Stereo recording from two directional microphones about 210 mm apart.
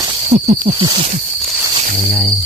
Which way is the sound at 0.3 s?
30° right (ahead or behind).